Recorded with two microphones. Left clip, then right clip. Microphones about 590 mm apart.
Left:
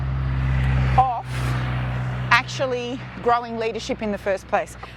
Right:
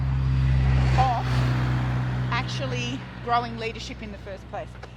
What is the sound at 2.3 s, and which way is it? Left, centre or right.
Speech, left.